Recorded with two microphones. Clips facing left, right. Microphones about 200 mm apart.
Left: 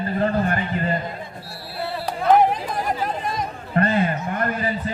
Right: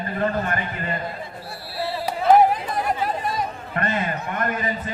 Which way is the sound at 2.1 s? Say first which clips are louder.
Right 1 dB; 5° right (ahead or behind).